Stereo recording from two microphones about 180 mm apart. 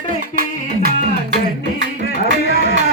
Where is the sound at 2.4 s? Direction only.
65° left (ahead or behind).